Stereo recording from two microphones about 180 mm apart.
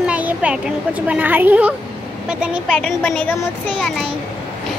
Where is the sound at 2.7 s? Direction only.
5° left (ahead or behind).